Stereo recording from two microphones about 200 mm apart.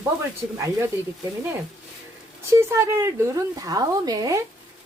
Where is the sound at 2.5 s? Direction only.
15° right (ahead or behind).